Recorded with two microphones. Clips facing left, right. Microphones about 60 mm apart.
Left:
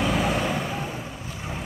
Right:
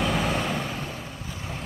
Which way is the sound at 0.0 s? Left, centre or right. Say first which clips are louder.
Left 2 dB; centre.